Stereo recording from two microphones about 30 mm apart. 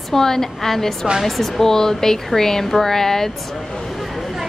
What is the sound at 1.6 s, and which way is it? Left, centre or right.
A woman's voice, centre.